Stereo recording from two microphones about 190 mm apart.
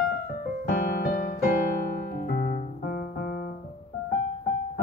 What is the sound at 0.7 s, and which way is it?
Music, 50° left (ahead or behind).